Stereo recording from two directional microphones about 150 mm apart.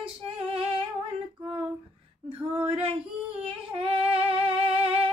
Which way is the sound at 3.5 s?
40° right (ahead or behind).